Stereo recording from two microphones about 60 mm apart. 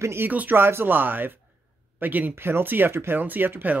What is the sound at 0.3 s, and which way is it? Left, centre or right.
Speech, right.